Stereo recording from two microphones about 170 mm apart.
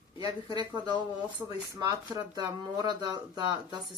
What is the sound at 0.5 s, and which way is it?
Speech, 25° right (ahead or behind).